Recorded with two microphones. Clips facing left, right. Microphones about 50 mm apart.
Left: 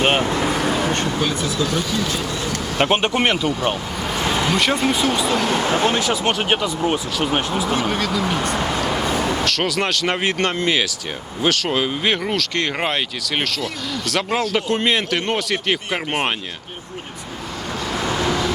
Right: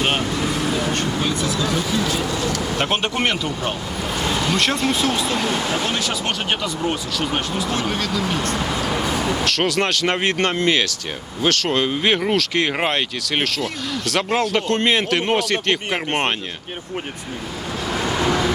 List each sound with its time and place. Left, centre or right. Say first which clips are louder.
0.0 s vehicle: left 3 dB; left
0.7 s vehicle: left 1 dB; centre
2.4 s vehicle: even; left
2.8 s speech: left 5 dB; centre
4.3 s a sound: left 2 dB; left
4.5 s speech: left 1 dB; centre
5.5 s speech: left 4 dB; left
6.0 s speech: left 4 dB; centre